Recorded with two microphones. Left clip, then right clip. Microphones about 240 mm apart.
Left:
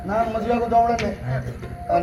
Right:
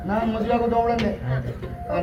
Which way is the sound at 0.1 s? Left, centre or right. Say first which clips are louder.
Left 2 dB; left.